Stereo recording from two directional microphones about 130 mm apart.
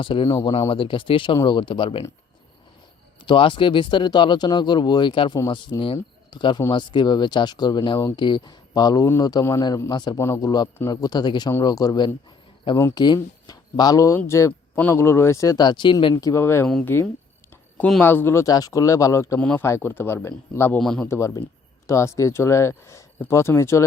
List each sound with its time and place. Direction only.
0.0 s speech: 40° left (ahead or behind)
3.2 s speech: 40° left (ahead or behind)
10.2 s speech: 20° left (ahead or behind); by 16.1 s 40° left (ahead or behind)
16.1 s speech: 20° left (ahead or behind)
17.5 s a sound: 10° left (ahead or behind)
18.0 s speech: 15° left (ahead or behind)
18.4 s speech: 30° left (ahead or behind)
19.4 s speech: 10° left (ahead or behind)
19.6 s speech: 20° left (ahead or behind)
20.7 s speech: 5° left (ahead or behind)
21.0 s speech: 20° left (ahead or behind)